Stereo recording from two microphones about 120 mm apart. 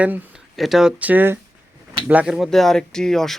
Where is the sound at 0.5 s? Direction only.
Centre (ahead or behind).